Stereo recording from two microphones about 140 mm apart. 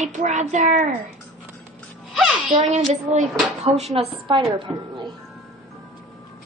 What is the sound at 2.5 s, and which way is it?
A woman's voice, 50° right (ahead or behind).